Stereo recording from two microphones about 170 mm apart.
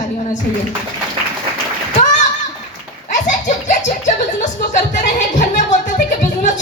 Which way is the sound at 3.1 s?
45° left (ahead or behind).